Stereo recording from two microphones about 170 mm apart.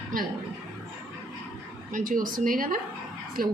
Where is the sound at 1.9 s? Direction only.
55° right (ahead or behind).